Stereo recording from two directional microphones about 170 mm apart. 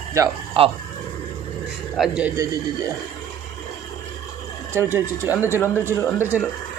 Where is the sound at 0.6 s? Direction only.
30° right (ahead or behind).